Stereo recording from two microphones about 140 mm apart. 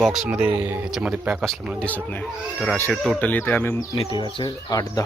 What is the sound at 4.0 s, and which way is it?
Speech, 35° left (ahead or behind).